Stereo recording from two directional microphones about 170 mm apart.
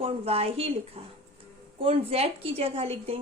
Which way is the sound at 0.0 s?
35° right (ahead or behind).